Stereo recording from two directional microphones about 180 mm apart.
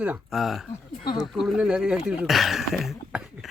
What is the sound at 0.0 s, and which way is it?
Speech, 5° right (ahead or behind).